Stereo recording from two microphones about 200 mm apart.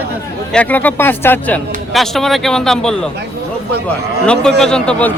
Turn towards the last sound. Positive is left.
turn(degrees=5)  # may be behind; listen again after turning